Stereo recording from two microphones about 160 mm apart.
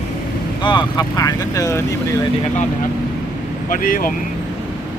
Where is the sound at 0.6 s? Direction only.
30° left (ahead or behind).